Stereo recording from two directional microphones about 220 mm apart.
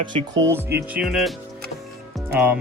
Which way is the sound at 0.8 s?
5° right (ahead or behind).